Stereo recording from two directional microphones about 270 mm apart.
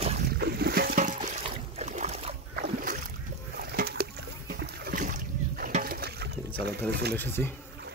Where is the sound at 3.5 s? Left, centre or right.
Right.